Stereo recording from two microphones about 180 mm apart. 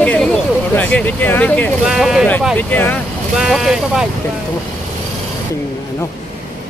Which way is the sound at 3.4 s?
Centre (ahead or behind).